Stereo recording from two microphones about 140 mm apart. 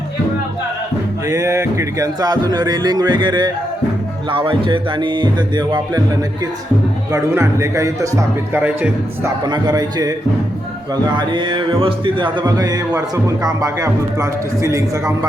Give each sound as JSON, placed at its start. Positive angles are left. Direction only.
{"t": 1.3, "sound": "speech", "side_deg": -25}
{"t": 4.3, "sound": "music", "side_deg": -40}
{"t": 7.1, "sound": "speech", "side_deg": -20}
{"t": 8.6, "sound": "a man's voice", "side_deg": -10}
{"t": 9.4, "sound": "speech", "side_deg": -30}